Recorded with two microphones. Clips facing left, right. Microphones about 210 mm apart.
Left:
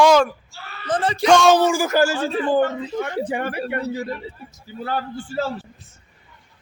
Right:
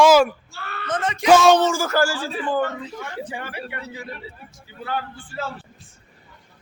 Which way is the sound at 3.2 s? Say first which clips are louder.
Left 8 dB; 55° left (ahead or behind).